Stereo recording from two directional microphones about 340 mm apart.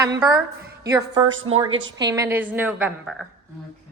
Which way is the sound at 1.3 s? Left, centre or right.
Right.